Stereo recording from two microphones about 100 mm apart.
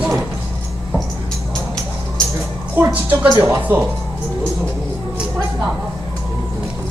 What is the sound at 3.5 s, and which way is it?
Speech, 25° right (ahead or behind).